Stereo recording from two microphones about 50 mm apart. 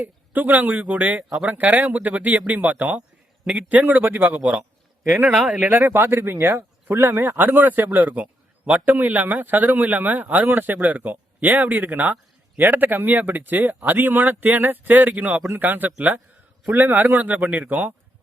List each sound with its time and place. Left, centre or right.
0.0 s speech: right
5.5 s speech: right
5.7 s speech: right